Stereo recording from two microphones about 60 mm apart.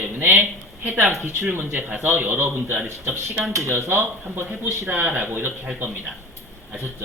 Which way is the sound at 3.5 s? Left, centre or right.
Right.